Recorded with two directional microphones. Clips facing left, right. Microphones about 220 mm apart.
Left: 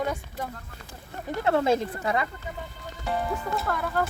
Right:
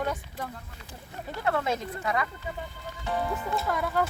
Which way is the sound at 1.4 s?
30° left (ahead or behind).